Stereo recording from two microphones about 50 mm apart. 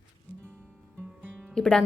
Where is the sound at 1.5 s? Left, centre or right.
Centre.